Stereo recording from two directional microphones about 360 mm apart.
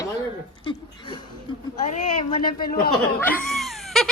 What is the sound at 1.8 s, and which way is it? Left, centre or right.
Speech, centre.